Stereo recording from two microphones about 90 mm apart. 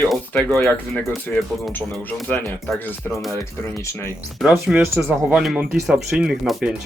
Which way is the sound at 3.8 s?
30° left (ahead or behind).